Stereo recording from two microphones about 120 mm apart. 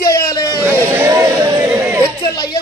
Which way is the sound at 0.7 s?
20° right (ahead or behind).